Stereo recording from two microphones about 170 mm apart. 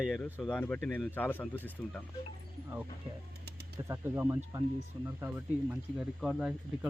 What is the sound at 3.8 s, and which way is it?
Speech, 15° right (ahead or behind).